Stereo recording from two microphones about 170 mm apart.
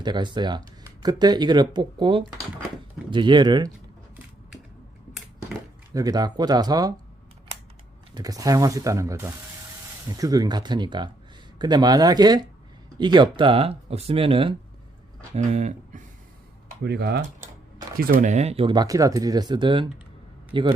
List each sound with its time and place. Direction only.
0.0 s speech: 25° right (ahead or behind)
5.9 s speech: 20° right (ahead or behind)
8.1 s speech: 20° right (ahead or behind)
15.4 s speech: 40° right (ahead or behind)
16.8 s cutlery: 85° right
17.9 s speech: 50° right (ahead or behind); by 20.7 s 30° right (ahead or behind)